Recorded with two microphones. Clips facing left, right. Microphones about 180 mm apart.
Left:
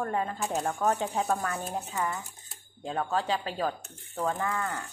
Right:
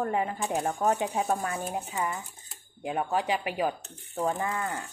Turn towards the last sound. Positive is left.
turn(degrees=-15)  # may be behind; listen again after turning